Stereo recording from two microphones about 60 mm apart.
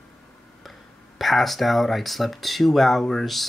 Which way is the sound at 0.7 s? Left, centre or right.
Centre.